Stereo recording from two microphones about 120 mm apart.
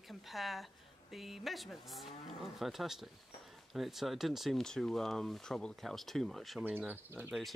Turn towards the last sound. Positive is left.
turn(degrees=-15)  # may be behind; listen again after turning